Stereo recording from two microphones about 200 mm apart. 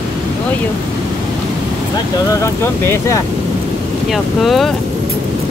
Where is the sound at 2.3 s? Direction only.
15° left (ahead or behind).